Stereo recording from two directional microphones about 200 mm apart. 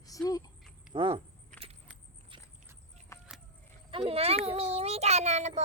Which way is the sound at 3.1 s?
15° left (ahead or behind).